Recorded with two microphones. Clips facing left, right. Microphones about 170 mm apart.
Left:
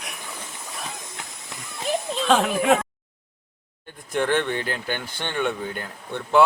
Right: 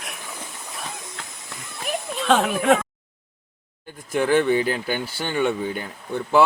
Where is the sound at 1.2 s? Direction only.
20° left (ahead or behind).